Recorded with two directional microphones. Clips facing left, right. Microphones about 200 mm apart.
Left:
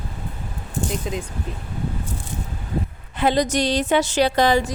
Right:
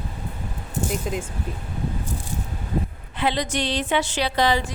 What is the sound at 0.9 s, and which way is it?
Speech, 5° right (ahead or behind).